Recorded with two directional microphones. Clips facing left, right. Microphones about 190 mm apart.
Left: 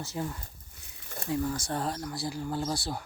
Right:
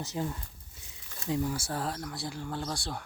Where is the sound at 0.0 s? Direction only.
20° right (ahead or behind).